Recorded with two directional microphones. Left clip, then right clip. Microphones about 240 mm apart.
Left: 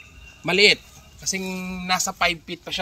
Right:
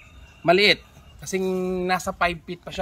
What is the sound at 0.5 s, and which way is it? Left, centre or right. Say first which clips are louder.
Speech: even; centre.